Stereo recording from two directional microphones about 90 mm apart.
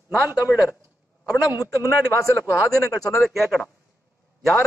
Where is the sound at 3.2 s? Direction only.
Centre (ahead or behind).